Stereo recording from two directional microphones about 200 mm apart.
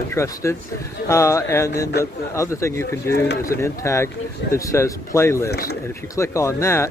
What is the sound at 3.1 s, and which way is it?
Speech, 50° left (ahead or behind).